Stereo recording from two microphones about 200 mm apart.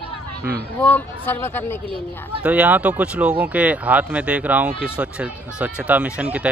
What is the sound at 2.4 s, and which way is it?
Speech, 5° right (ahead or behind).